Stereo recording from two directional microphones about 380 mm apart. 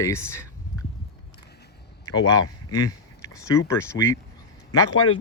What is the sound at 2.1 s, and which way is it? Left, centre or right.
Speech, centre.